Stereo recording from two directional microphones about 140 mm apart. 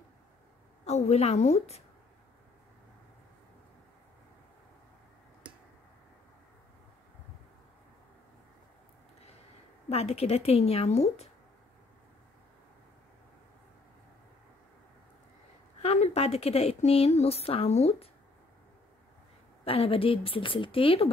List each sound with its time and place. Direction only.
0.8 s speech: 50° left (ahead or behind)
9.8 s speech: 45° left (ahead or behind)
15.8 s speech: 50° left (ahead or behind)
19.6 s speech: 45° left (ahead or behind)